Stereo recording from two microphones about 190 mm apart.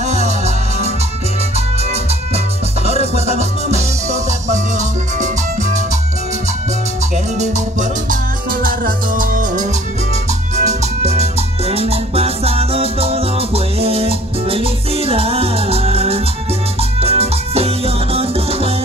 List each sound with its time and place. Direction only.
0.0 s music: 35° right (ahead or behind)
2.9 s music: 35° right (ahead or behind)
7.3 s music: 40° right (ahead or behind)
8.1 s music: 50° right (ahead or behind); by 18.7 s 30° right (ahead or behind)